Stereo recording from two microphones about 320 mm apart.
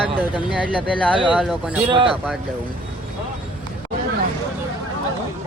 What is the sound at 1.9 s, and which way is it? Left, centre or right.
Speech, centre.